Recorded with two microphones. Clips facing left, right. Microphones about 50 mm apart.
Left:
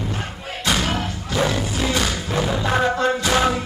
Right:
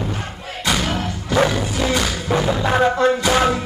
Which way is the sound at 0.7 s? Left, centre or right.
Centre.